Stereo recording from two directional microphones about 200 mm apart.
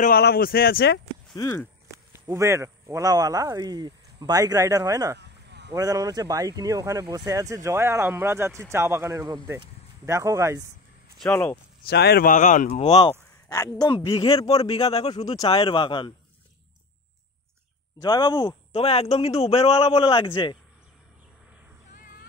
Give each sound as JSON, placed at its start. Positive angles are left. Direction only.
{"t": 0.0, "sound": "speech", "side_deg": 50}
{"t": 1.3, "sound": "speech", "side_deg": 15}
{"t": 1.9, "sound": "speech", "side_deg": -15}
{"t": 5.2, "sound": "a sound", "side_deg": -60}
{"t": 5.7, "sound": "speech", "side_deg": -20}
{"t": 11.1, "sound": "speech", "side_deg": 5}
{"t": 11.9, "sound": "speech", "side_deg": 55}
{"t": 13.5, "sound": "speech", "side_deg": 20}
{"t": 15.2, "sound": "speech", "side_deg": 20}
{"t": 18.0, "sound": "speech", "side_deg": 20}